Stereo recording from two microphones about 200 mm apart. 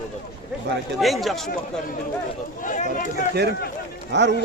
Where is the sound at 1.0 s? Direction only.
Centre (ahead or behind).